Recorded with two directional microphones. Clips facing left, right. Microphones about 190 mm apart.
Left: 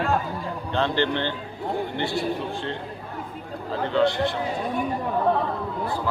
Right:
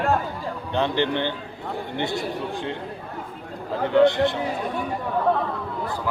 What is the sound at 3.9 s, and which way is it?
Speech, 20° right (ahead or behind).